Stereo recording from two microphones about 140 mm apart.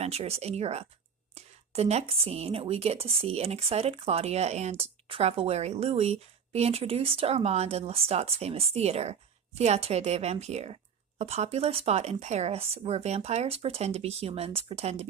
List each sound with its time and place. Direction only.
0.0 s a woman's voice: 45° right (ahead or behind)